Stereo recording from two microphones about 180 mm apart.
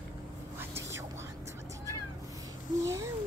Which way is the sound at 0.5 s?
15° right (ahead or behind).